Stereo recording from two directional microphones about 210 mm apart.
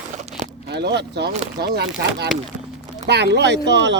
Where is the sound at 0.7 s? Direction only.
55° right (ahead or behind).